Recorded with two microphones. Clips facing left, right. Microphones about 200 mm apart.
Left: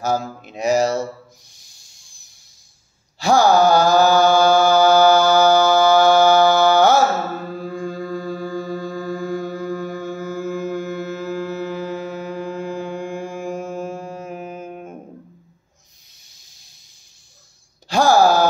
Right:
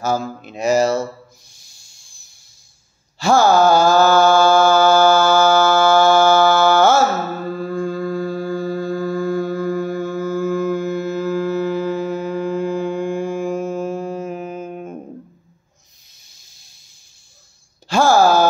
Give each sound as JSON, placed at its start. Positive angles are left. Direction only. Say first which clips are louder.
{"t": 0.0, "sound": "mantra", "louder": "right 1 dB", "side_deg": 15}
{"t": 1.5, "sound": "hiss", "louder": "right 1 dB", "side_deg": 15}
{"t": 3.2, "sound": "mantra", "louder": "right 1 dB", "side_deg": 15}
{"t": 8.1, "sound": "music", "louder": "right 4 dB", "side_deg": -10}
{"t": 9.1, "sound": "music", "louder": "right 3 dB", "side_deg": 15}
{"t": 9.9, "sound": "a sound", "louder": "right 5 dB", "side_deg": 15}
{"t": 17.8, "sound": "a sound", "louder": "right 1 dB", "side_deg": 15}